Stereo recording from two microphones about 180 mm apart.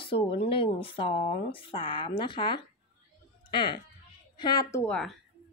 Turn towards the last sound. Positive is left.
turn(degrees=5)  # may be behind; listen again after turning